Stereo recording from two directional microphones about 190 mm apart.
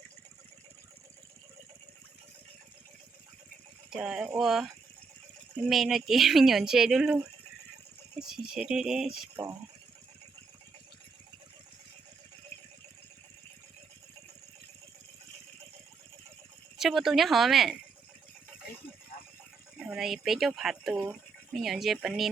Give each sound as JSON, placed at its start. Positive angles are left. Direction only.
{"t": 3.8, "sound": "speech", "side_deg": -5}
{"t": 8.5, "sound": "speech", "side_deg": -5}
{"t": 9.3, "sound": "speech", "side_deg": -20}
{"t": 16.7, "sound": "speech", "side_deg": 0}
{"t": 19.8, "sound": "speech", "side_deg": -5}